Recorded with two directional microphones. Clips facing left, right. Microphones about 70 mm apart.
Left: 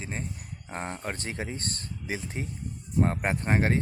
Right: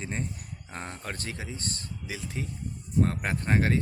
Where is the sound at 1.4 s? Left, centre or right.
Left.